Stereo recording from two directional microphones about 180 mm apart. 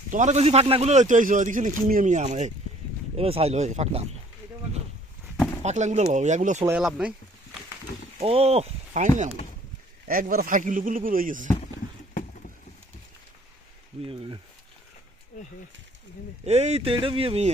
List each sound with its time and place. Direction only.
0.1 s a man's voice: 40° right (ahead or behind)
5.6 s speech: 40° right (ahead or behind)
6.7 s speech: 5° right (ahead or behind)
8.2 s a man's voice: 35° right (ahead or behind); by 11.4 s 50° right (ahead or behind)
14.0 s speech: 30° right (ahead or behind)
16.5 s speech: 35° right (ahead or behind)